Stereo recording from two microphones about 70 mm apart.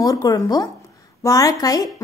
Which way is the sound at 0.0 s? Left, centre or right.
Left.